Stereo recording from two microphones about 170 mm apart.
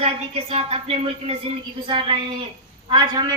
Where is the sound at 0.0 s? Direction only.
35° right (ahead or behind).